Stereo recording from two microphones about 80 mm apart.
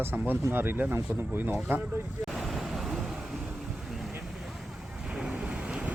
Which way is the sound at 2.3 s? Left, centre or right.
Centre.